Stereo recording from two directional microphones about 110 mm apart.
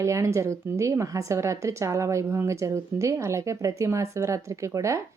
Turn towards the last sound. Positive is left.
turn(degrees=-30)  # may be behind; listen again after turning